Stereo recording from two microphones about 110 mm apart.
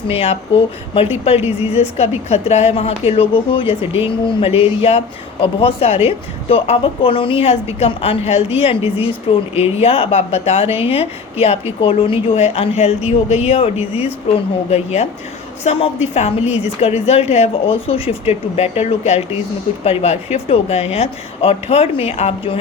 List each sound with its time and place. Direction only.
0.1 s a woman's voice: 60° left (ahead or behind)
14.3 s a woman's voice: 80° left
15.6 s a woman's voice: 70° left (ahead or behind)